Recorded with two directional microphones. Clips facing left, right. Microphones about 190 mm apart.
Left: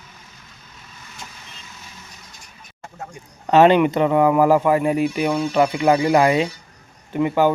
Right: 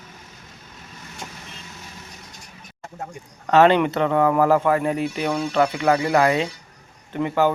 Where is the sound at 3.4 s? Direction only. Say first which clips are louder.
Left 2 dB; 15° left (ahead or behind).